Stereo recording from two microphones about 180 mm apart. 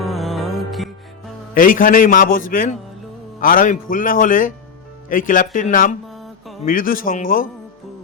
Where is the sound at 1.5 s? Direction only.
50° left (ahead or behind).